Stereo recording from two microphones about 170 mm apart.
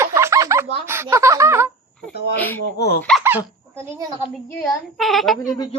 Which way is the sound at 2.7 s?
70° left (ahead or behind).